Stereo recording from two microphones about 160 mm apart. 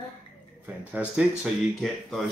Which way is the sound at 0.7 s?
10° right (ahead or behind).